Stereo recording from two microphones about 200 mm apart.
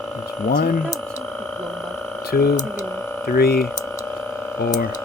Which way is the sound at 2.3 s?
50° left (ahead or behind).